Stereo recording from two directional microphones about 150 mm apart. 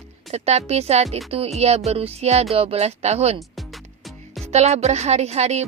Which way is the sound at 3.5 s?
Centre (ahead or behind).